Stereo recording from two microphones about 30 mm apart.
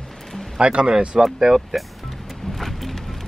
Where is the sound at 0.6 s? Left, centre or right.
Right.